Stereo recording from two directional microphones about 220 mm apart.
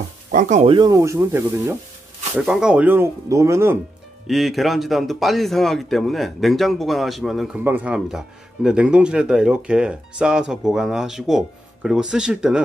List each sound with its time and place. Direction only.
0.3 s speech: 35° right (ahead or behind)
0.7 s speech: 15° right (ahead or behind)
2.3 s speech: 5° right (ahead or behind)
4.3 s speech: centre (ahead or behind)